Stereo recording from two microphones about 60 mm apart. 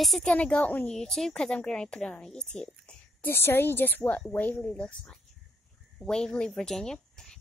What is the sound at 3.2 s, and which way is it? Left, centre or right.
A woman's voice, left.